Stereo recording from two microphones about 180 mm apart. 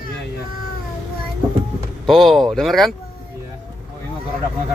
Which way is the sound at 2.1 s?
Centre (ahead or behind).